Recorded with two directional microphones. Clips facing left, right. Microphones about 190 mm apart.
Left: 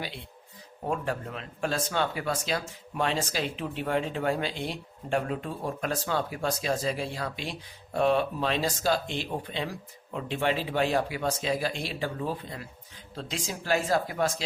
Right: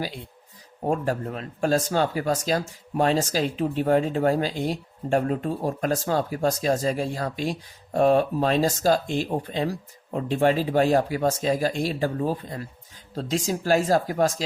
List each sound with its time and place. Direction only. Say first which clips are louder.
0.9 s speech: right 6 dB; 40° right (ahead or behind)